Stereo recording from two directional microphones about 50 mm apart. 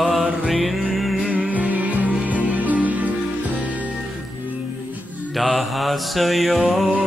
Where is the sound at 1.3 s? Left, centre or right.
Right.